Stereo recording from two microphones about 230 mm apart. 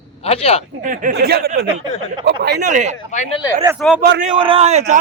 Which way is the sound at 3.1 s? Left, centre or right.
Left.